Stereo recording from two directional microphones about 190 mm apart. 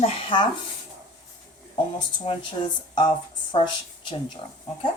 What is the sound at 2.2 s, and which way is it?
Speech, 30° left (ahead or behind).